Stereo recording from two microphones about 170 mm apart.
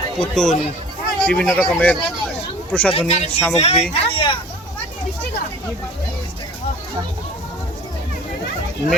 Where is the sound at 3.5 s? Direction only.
40° left (ahead or behind).